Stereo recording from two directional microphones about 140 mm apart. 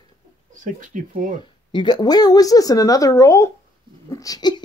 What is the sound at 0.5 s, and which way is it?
Speech, 65° right (ahead or behind).